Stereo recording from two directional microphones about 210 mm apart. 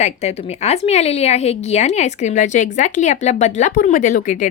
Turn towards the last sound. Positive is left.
turn(degrees=35)  # may be behind; listen again after turning